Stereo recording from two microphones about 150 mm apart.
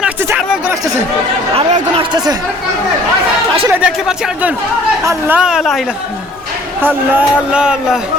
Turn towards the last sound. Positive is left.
turn(degrees=-5)  # may be behind; listen again after turning